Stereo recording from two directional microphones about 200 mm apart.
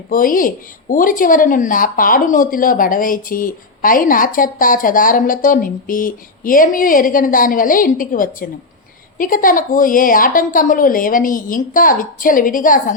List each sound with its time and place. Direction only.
0.1 s speech: 45° left (ahead or behind)